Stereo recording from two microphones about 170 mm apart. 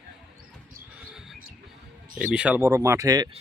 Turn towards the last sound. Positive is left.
turn(degrees=-20)  # may be behind; listen again after turning